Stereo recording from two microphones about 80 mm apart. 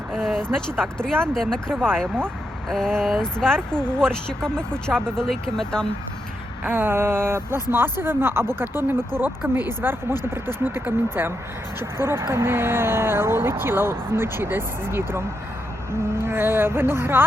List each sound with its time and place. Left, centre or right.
0.1 s speech: centre
6.7 s speech: right